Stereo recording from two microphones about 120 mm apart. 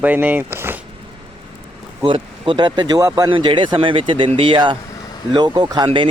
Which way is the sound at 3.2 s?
45° right (ahead or behind).